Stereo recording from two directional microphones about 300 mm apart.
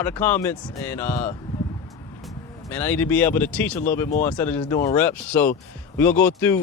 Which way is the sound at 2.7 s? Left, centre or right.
Centre.